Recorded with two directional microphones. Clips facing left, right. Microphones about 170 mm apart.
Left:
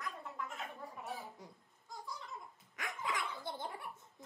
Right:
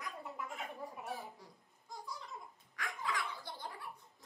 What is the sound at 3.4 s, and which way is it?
Cough, 25° left (ahead or behind).